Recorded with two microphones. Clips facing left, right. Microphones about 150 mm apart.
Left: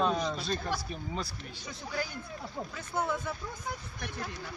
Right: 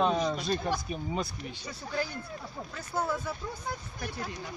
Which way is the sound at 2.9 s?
5° right (ahead or behind).